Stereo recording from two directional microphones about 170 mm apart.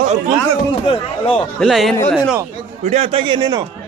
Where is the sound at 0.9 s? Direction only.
35° left (ahead or behind).